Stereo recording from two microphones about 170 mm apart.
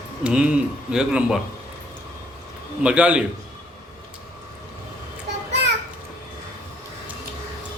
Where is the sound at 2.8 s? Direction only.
5° right (ahead or behind).